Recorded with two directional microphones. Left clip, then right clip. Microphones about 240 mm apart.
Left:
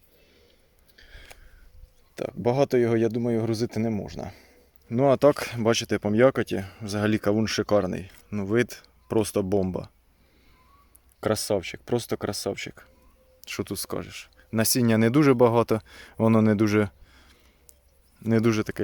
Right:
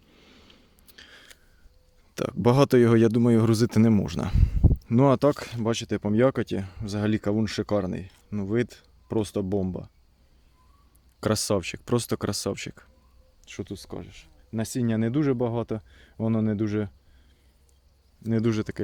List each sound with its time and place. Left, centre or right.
0.3 s a sound: right
2.1 s speech: right
4.9 s speech: centre
5.3 s speech: centre
11.2 s speech: centre
13.4 s speech: centre
18.3 s speech: centre